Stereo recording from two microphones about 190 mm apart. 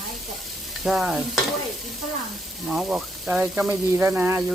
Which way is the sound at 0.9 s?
5° right (ahead or behind).